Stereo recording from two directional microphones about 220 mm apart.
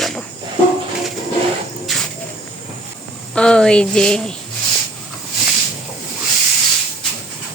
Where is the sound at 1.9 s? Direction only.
Centre (ahead or behind).